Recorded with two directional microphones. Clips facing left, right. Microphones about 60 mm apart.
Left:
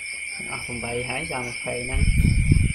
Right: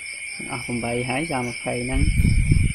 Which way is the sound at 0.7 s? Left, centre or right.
Right.